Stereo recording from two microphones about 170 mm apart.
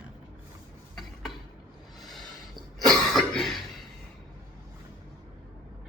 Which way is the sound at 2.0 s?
Centre (ahead or behind).